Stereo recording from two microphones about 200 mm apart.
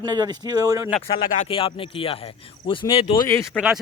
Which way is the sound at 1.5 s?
25° left (ahead or behind).